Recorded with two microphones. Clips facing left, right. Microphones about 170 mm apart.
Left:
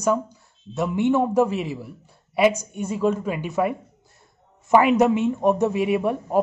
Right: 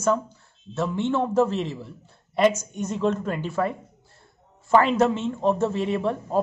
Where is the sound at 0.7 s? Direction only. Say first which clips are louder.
Left 4 dB; 15° left (ahead or behind).